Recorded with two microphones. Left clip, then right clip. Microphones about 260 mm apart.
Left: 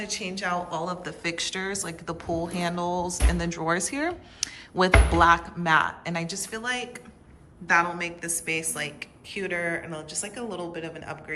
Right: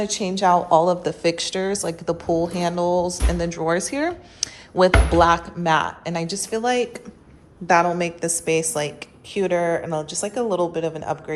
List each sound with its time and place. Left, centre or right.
0.0 s a woman's voice: centre